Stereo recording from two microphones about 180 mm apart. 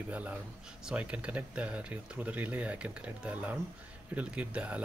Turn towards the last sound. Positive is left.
turn(degrees=-5)  # may be behind; listen again after turning